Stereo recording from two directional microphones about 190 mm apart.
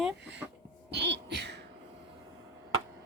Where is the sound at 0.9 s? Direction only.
65° right (ahead or behind).